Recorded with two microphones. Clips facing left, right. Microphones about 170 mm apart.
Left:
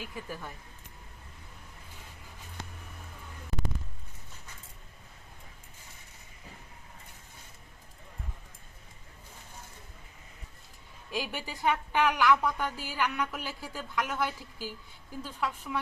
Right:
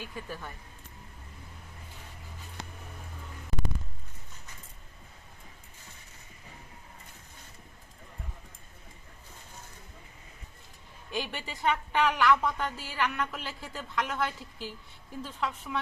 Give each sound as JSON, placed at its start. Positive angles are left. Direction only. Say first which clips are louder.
{"t": 0.0, "sound": "speech", "louder": "even", "side_deg": 10}
{"t": 11.1, "sound": "a woman's voice", "louder": "even", "side_deg": 5}